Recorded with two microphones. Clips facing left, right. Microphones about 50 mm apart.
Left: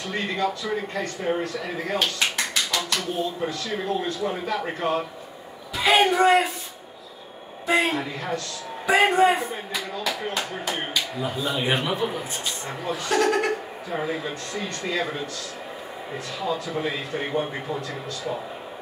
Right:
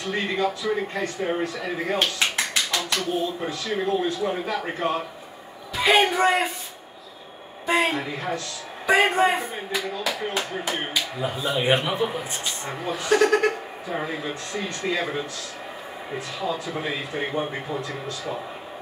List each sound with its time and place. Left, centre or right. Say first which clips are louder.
0.0 s speech: right 1 dB; centre
2.2 s tap: right 1 dB; centre
2.9 s a man's voice: right 1 dB; centre
7.6 s speech: even; centre